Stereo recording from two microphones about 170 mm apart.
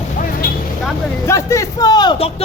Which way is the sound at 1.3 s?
20° left (ahead or behind).